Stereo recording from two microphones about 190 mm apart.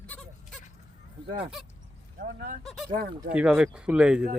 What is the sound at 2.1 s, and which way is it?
Speech, 50° right (ahead or behind).